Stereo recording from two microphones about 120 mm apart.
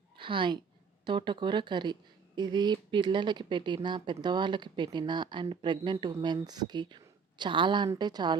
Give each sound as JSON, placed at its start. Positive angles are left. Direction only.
{"t": 0.2, "sound": "a woman's voice", "side_deg": -45}